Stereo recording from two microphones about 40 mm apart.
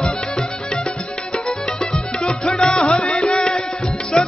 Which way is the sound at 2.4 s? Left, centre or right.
Centre.